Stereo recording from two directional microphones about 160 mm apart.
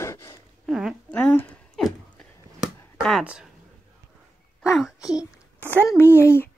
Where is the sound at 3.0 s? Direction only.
Centre (ahead or behind).